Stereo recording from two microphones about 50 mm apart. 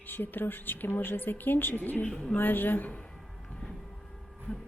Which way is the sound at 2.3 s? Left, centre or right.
Left.